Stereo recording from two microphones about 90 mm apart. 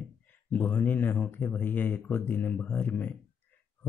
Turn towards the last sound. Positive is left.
turn(degrees=20)  # may be behind; listen again after turning